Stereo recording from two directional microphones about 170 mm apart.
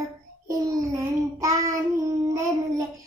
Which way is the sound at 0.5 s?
20° right (ahead or behind).